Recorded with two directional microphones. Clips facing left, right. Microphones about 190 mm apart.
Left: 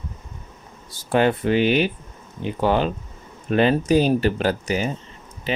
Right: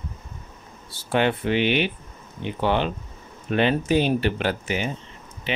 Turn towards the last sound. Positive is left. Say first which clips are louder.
# left 3 dB
turn(degrees=40)  # may be behind; listen again after turning